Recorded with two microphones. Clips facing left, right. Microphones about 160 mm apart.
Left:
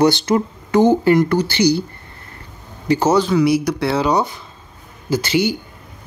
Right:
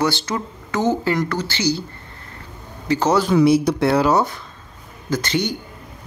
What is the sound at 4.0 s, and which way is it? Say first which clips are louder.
Speech: even; centre (ahead or behind).